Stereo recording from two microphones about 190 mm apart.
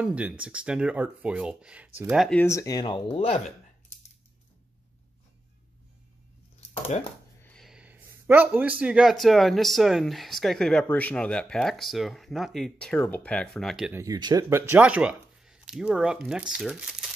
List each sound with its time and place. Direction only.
0.0 s speech: 5° right (ahead or behind)
2.4 s speech: 15° left (ahead or behind); by 3.5 s 35° left (ahead or behind)
6.9 s speech: 35° left (ahead or behind)
7.4 s speech: centre (ahead or behind)
13.9 s speech: 20° right (ahead or behind)